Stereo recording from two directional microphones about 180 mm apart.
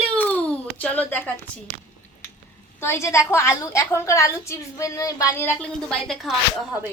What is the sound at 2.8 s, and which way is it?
A woman's voice, 15° left (ahead or behind).